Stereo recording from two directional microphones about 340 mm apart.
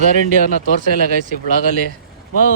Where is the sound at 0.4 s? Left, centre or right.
Left.